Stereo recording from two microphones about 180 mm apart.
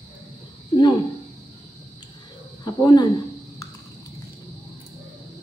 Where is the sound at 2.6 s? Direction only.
25° left (ahead or behind).